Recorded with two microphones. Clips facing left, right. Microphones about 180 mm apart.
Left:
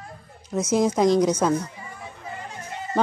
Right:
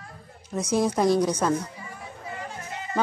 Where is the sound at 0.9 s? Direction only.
15° left (ahead or behind).